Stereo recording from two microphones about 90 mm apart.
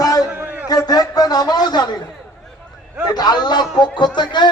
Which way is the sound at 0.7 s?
45° left (ahead or behind).